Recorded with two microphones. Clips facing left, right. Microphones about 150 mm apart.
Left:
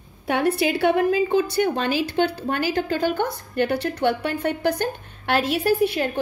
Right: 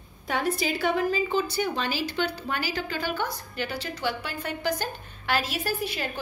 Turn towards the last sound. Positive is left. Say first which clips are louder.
# left 10 dB
turn(degrees=60)  # may be behind; listen again after turning